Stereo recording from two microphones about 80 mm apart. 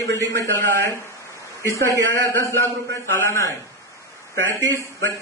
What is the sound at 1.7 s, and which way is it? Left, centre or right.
A man's voice, left.